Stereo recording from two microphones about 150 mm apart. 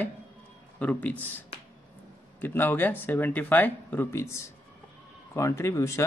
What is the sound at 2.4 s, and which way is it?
Speech, 15° left (ahead or behind).